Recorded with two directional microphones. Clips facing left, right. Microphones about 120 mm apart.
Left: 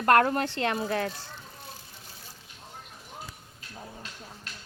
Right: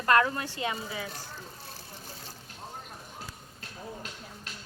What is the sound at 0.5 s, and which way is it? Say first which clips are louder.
Speech: left 6 dB; 70° left (ahead or behind).